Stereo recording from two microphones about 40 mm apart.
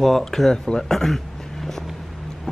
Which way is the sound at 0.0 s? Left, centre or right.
Centre.